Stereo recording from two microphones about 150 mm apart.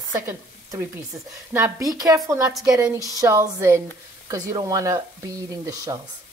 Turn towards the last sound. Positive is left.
turn(degrees=-25)  # may be behind; listen again after turning